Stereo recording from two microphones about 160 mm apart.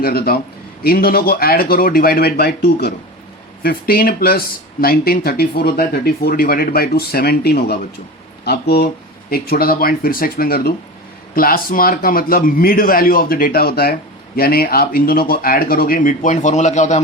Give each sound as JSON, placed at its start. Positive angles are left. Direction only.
{"t": 0.0, "sound": "speech", "side_deg": 70}
{"t": 9.3, "sound": "a man's voice", "side_deg": 70}